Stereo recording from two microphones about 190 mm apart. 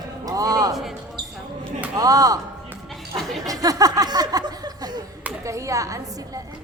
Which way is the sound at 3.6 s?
20° right (ahead or behind).